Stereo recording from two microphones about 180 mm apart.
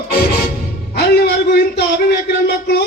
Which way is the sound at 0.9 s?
65° left (ahead or behind).